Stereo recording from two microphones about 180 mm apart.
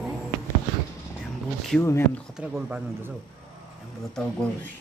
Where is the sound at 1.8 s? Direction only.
15° left (ahead or behind).